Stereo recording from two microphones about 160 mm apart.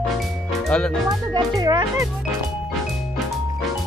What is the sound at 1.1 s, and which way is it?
A child's voice, 25° right (ahead or behind).